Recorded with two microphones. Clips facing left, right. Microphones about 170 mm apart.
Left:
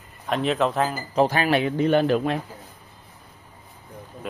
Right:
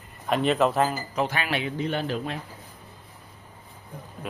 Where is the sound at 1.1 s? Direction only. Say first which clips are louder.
Left 10 dB; 35° left (ahead or behind); by 2.3 s 60° left (ahead or behind).